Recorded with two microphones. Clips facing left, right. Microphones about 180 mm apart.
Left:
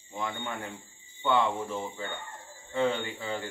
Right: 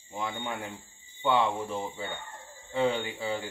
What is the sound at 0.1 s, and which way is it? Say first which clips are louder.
Speech: right 1 dB; 10° right (ahead or behind).